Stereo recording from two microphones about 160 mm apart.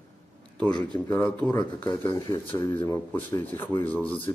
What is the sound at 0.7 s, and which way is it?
Speech, 25° left (ahead or behind).